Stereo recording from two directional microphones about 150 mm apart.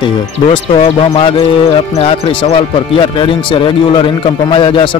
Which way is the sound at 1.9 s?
40° left (ahead or behind).